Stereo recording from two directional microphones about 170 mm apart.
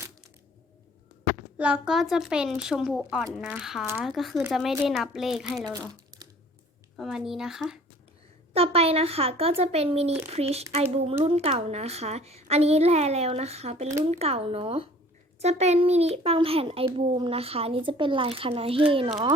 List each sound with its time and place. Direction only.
1.5 s a woman's voice: 5° right (ahead or behind)
6.9 s a woman's voice: centre (ahead or behind)
8.5 s a child's voice: 35° right (ahead or behind)